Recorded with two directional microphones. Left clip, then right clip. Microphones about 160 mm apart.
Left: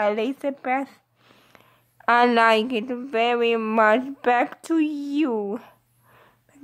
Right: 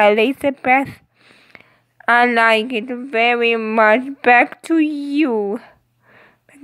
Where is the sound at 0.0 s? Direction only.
15° right (ahead or behind).